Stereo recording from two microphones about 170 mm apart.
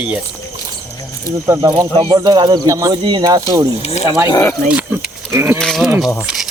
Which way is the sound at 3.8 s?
40° left (ahead or behind).